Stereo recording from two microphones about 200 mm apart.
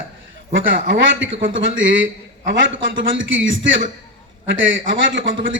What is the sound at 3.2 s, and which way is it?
Speech, 70° right (ahead or behind).